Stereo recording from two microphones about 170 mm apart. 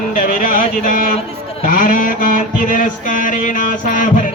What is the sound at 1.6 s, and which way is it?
Mantra, 55° left (ahead or behind).